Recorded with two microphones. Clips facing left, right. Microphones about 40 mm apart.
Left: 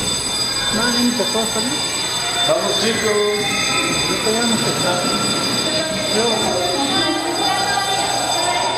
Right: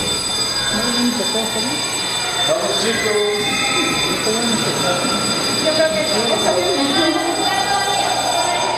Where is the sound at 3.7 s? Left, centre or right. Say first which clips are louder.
Right 1 dB; centre.